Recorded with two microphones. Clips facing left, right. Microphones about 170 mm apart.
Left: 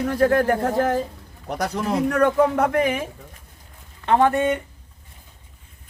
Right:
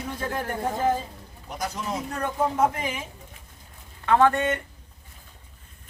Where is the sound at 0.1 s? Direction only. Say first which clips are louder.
Left 12 dB; 70° left (ahead or behind).